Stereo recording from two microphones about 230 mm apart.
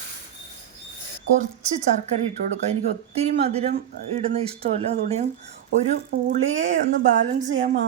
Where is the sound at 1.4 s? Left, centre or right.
Right.